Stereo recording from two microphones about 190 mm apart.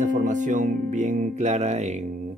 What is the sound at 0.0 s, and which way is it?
Music, 40° right (ahead or behind).